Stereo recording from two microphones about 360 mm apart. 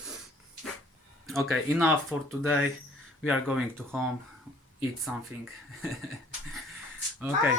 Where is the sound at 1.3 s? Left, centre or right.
Centre.